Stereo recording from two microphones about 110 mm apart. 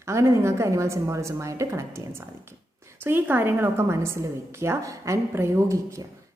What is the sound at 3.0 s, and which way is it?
A woman's voice, 20° right (ahead or behind).